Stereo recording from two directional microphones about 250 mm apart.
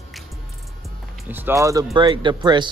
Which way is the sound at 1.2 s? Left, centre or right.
Centre.